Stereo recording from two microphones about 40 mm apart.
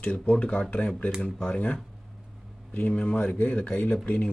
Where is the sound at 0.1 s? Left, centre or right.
Left.